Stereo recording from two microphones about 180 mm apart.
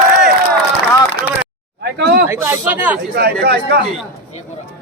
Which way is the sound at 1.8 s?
65° right (ahead or behind).